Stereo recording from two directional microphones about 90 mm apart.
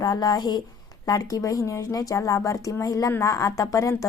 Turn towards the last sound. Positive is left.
turn(degrees=40)  # may be behind; listen again after turning